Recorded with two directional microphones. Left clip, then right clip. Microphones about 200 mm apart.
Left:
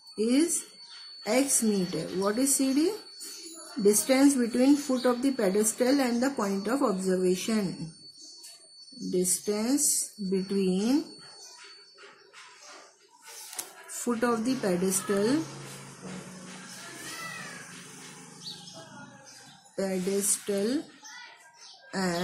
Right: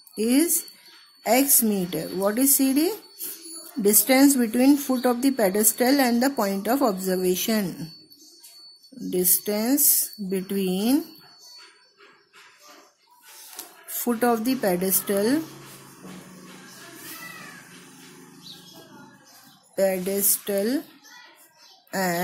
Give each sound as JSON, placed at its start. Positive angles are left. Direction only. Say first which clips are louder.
{"t": 0.1, "sound": "a woman's voice", "louder": "right 4 dB", "side_deg": -45}
{"t": 9.4, "sound": "a woman's voice", "louder": "right 4 dB", "side_deg": -40}
{"t": 13.9, "sound": "a woman's voice", "louder": "right 5 dB", "side_deg": -45}
{"t": 19.7, "sound": "a woman's voice", "louder": "right 7 dB", "side_deg": -45}
{"t": 21.9, "sound": "speech", "louder": "right 6 dB", "side_deg": -45}